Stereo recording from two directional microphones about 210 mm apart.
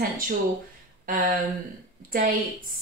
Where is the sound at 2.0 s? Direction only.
40° right (ahead or behind).